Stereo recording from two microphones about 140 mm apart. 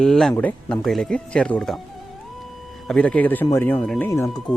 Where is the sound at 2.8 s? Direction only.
10° left (ahead or behind).